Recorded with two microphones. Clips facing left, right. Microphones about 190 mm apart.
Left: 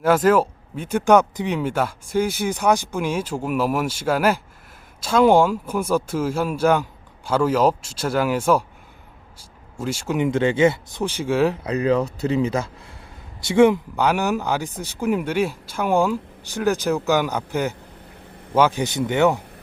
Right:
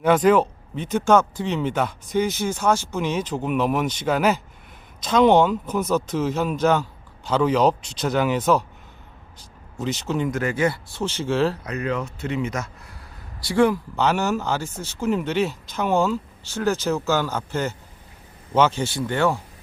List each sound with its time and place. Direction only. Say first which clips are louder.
0.0 s speech: even; 5° left (ahead or behind)
9.8 s speech: left 2 dB; 10° left (ahead or behind)
10.2 s speech: left 7 dB; 25° left (ahead or behind)
11.6 s speech: left 6 dB; 30° left (ahead or behind)
13.5 s speech: left 4 dB; 20° left (ahead or behind)
13.9 s speech: left 1 dB; 10° left (ahead or behind)